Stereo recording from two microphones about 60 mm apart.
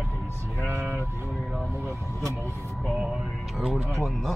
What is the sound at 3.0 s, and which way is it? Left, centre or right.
Speech, centre.